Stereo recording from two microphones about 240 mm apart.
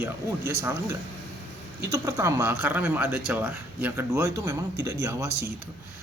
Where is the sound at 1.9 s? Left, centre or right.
Centre.